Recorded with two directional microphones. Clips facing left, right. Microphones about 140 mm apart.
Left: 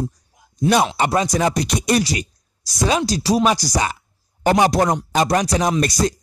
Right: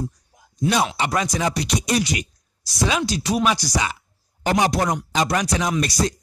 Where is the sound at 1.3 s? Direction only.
50° left (ahead or behind).